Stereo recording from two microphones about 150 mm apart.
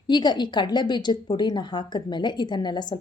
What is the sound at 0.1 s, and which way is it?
A woman's voice, 30° left (ahead or behind).